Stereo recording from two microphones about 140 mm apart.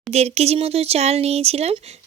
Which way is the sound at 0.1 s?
50° right (ahead or behind).